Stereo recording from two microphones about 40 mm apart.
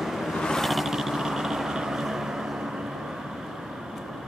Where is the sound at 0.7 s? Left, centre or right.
Centre.